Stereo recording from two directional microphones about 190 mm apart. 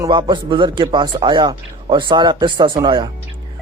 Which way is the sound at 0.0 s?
25° right (ahead or behind).